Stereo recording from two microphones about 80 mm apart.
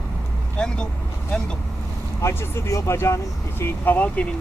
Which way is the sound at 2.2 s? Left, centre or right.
Left.